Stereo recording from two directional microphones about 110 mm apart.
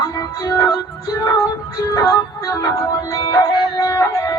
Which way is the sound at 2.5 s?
30° left (ahead or behind).